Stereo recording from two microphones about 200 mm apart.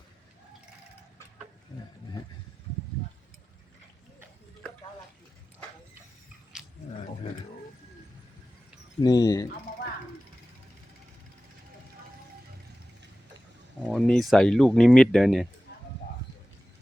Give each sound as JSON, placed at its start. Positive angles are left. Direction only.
{"t": 6.5, "sound": "roaring cats", "side_deg": -5}
{"t": 9.0, "sound": "speech", "side_deg": 20}
{"t": 13.8, "sound": "speech", "side_deg": 0}